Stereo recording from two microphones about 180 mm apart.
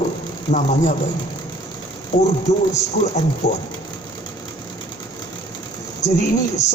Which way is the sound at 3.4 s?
70° left (ahead or behind).